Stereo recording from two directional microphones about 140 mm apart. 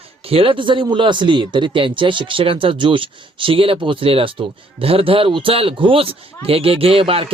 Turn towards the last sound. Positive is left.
turn(degrees=-40)  # may be behind; listen again after turning